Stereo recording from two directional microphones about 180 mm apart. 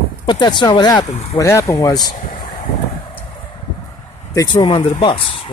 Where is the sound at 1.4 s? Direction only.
15° left (ahead or behind).